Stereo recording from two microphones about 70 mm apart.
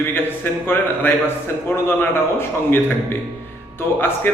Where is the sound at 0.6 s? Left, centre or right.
Left.